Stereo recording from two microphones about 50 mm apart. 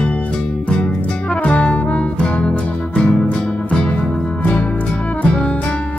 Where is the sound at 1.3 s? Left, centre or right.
Left.